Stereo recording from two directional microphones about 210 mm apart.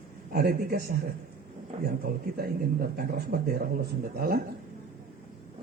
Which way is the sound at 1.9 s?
45° right (ahead or behind).